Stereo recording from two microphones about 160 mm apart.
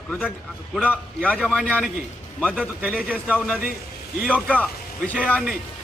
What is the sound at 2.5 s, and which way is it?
Speech, 5° right (ahead or behind).